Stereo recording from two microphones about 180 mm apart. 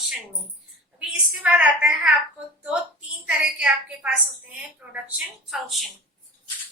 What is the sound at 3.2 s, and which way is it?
A woman's voice, 5° right (ahead or behind).